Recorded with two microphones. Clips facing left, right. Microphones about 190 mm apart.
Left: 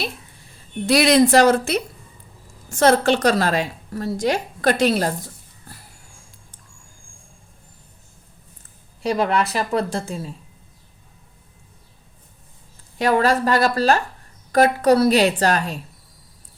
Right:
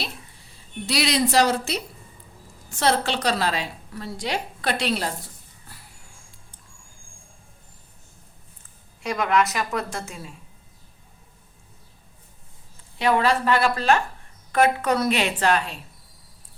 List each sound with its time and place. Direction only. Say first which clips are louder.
0.9 s a woman's voice: left 9 dB; 50° left (ahead or behind)
9.0 s a woman's voice: left 2 dB; 30° left (ahead or behind)
13.0 s a woman's voice: left 3 dB; 45° left (ahead or behind)